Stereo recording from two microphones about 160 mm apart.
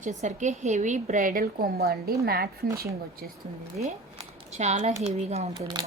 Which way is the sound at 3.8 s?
55° right (ahead or behind).